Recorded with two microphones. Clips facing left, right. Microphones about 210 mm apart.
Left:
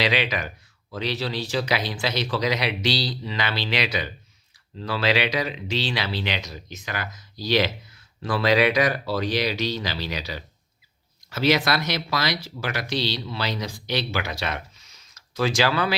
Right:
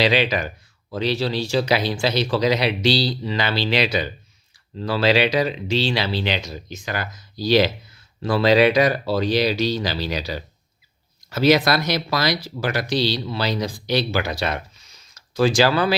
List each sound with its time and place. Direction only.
0.0 s speech: 30° right (ahead or behind)